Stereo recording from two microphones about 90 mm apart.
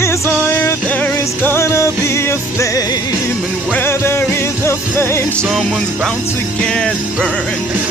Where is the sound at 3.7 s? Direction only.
25° left (ahead or behind).